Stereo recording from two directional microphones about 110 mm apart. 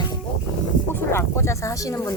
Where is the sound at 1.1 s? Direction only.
25° left (ahead or behind).